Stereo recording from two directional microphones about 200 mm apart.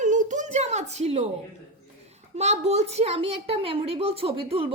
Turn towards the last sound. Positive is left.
turn(degrees=-25)  # may be behind; listen again after turning